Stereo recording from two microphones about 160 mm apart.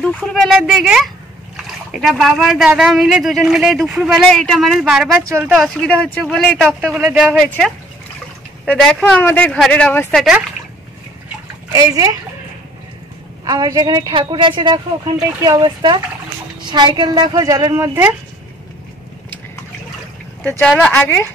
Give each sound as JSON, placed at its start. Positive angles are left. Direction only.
{"t": 0.0, "sound": "speech", "side_deg": 5}
{"t": 7.4, "sound": "speech", "side_deg": 5}
{"t": 11.7, "sound": "a woman's voice", "side_deg": -20}
{"t": 13.5, "sound": "a woman's voice", "side_deg": -25}
{"t": 20.4, "sound": "speech", "side_deg": 10}